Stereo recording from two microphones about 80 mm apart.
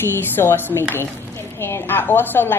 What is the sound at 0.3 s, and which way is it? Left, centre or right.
A woman's voice, left.